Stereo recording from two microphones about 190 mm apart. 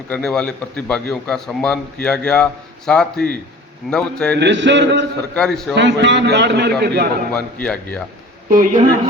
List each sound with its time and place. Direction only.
0.1 s a man's voice: 5° left (ahead or behind)
4.4 s a sound: 70° right (ahead or behind)
5.3 s a man's voice: 5° left (ahead or behind)
5.7 s a man's voice: 65° right (ahead or behind)
7.3 s speech: 5° left (ahead or behind)
8.4 s a woman's voice: 45° right (ahead or behind)